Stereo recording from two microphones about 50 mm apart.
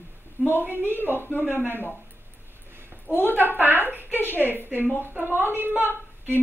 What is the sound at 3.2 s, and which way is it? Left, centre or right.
A woman's voice, right.